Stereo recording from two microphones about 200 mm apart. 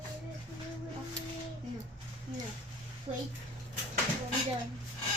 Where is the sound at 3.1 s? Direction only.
30° right (ahead or behind).